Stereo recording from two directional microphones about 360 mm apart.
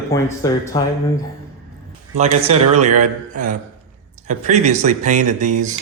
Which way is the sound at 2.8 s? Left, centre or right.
Centre.